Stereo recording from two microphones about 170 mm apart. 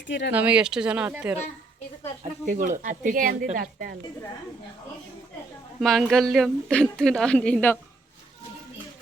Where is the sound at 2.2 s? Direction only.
50° right (ahead or behind).